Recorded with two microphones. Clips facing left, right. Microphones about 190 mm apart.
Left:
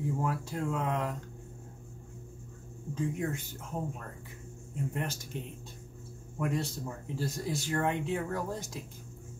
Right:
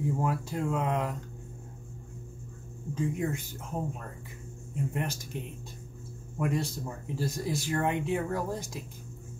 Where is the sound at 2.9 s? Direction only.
15° right (ahead or behind).